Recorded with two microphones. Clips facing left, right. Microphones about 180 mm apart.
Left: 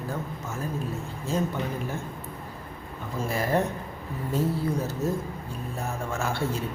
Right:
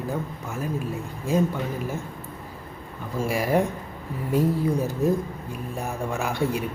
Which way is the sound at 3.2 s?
10° right (ahead or behind).